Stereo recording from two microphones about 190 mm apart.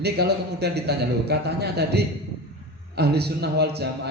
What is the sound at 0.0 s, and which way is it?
A man's voice, 60° right (ahead or behind).